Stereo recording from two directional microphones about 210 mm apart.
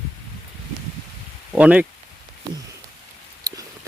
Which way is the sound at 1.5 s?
5° right (ahead or behind).